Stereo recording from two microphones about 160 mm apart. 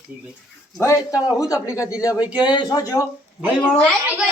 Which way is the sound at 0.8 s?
20° left (ahead or behind).